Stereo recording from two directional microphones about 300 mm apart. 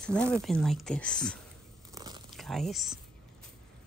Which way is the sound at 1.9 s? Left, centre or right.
Centre.